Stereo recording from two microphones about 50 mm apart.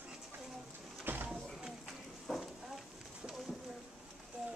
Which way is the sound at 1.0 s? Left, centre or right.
Right.